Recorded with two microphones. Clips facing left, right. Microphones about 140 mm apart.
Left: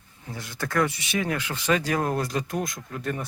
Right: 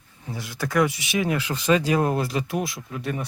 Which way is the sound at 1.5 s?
15° right (ahead or behind).